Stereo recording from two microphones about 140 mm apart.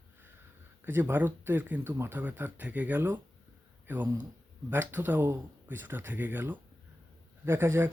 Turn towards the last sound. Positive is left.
turn(degrees=-15)  # may be behind; listen again after turning